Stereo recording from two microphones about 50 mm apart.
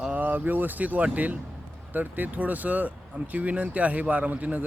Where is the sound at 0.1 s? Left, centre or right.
Right.